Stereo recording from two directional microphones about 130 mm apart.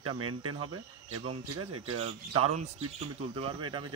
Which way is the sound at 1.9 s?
50° right (ahead or behind).